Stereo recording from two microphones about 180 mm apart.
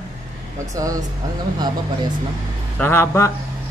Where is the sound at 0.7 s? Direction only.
20° right (ahead or behind).